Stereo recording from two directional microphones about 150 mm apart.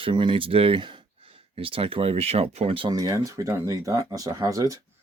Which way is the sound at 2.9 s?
25° right (ahead or behind).